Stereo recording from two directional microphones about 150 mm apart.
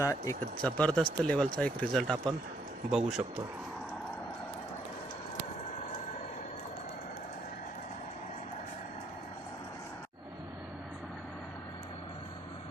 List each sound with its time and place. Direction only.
0.0 s speech: 20° left (ahead or behind)
0.6 s speech: 5° left (ahead or behind)